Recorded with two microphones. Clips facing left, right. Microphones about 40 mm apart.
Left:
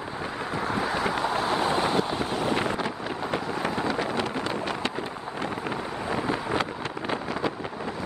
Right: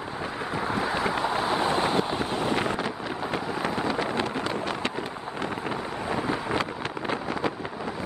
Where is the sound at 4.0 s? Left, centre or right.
Right.